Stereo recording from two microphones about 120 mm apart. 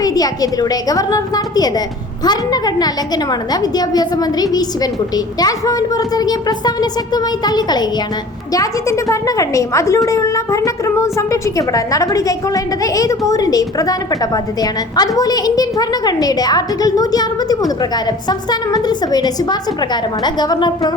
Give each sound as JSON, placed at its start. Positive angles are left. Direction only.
{"t": 0.0, "sound": "a woman's voice", "side_deg": 30}